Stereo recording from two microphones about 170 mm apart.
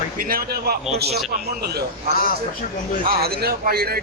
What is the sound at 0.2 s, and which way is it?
A man's voice, 60° right (ahead or behind).